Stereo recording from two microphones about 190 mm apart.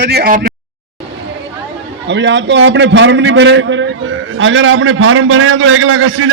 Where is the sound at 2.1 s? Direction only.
70° right (ahead or behind); by 6.2 s 85° right.